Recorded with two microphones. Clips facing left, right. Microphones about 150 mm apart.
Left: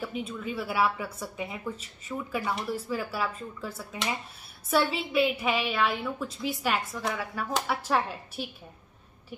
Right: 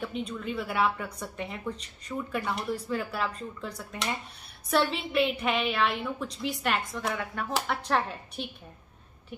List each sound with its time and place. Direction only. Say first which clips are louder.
0.0 s a woman's voice: even; 5° left (ahead or behind)